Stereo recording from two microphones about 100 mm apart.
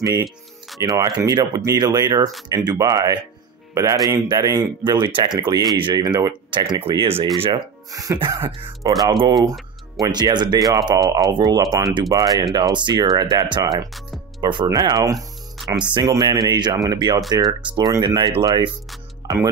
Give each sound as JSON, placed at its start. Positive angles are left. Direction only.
{"t": 0.0, "sound": "speech", "side_deg": -45}
{"t": 4.9, "sound": "speech", "side_deg": -50}
{"t": 7.9, "sound": "speech", "side_deg": -35}
{"t": 9.0, "sound": "speech", "side_deg": -45}
{"t": 12.5, "sound": "speech", "side_deg": -50}
{"t": 15.1, "sound": "music", "side_deg": 0}
{"t": 15.9, "sound": "speech", "side_deg": -45}